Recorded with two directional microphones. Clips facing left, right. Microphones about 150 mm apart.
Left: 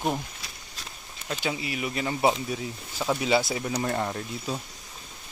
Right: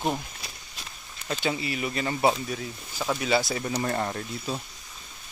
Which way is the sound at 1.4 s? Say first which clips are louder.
Right 2 dB; 10° left (ahead or behind).